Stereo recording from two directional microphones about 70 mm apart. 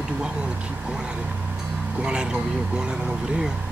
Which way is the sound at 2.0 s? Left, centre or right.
Centre.